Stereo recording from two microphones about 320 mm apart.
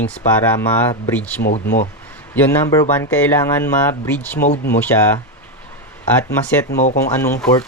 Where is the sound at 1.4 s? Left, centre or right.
Left.